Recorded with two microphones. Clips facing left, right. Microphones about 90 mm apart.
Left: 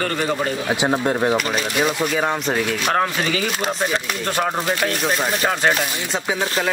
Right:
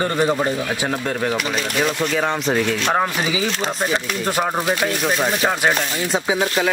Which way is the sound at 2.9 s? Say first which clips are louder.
Even; 10° right (ahead or behind).